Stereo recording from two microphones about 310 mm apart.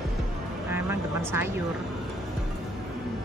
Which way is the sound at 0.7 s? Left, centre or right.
Centre.